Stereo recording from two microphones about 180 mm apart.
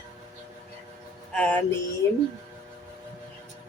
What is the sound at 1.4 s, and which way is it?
Speech, 5° left (ahead or behind).